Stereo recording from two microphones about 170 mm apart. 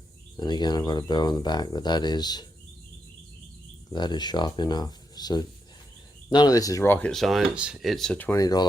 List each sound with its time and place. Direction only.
0.3 s speech: 25° left (ahead or behind)
3.9 s speech: 25° left (ahead or behind)
7.1 s speech: centre (ahead or behind)
8.4 s speech: 20° left (ahead or behind)